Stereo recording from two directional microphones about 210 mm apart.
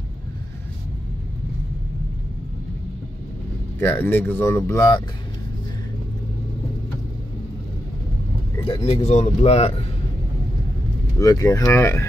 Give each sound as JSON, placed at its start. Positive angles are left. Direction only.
{"t": 3.8, "sound": "speech", "side_deg": 10}
{"t": 8.6, "sound": "speech", "side_deg": 30}
{"t": 11.1, "sound": "speech", "side_deg": 15}